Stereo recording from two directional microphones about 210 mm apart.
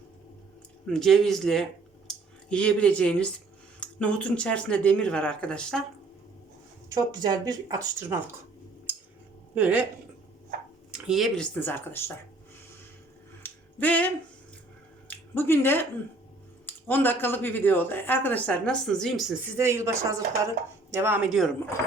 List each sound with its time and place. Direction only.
0.9 s speech: centre (ahead or behind)
6.9 s speech: 20° right (ahead or behind)
9.6 s speech: 5° right (ahead or behind)
10.9 s a woman's voice: centre (ahead or behind)
13.4 s finger snapping: 5° left (ahead or behind)
15.0 s a woman's voice: 10° left (ahead or behind)
19.5 s speech: 15° right (ahead or behind)